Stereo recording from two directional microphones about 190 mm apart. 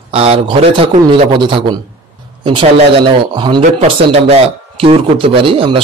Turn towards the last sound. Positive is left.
turn(degrees=-30)  # may be behind; listen again after turning